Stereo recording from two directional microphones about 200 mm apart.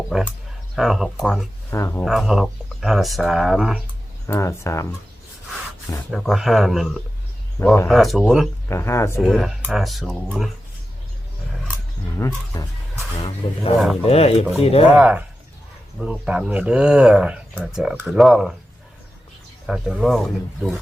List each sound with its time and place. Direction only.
0.1 s speech: 5° left (ahead or behind)
1.7 s speech: 15° left (ahead or behind)
2.0 s speech: centre (ahead or behind)
4.3 s speech: 15° left (ahead or behind)
6.1 s speech: centre (ahead or behind)
8.7 s speech: 15° left (ahead or behind)
9.2 s speech: centre (ahead or behind)
12.1 s speech: 15° left (ahead or behind)
14.0 s speech: 30° left (ahead or behind)
14.9 s speech: 5° right (ahead or behind)
19.6 s speech: centre (ahead or behind)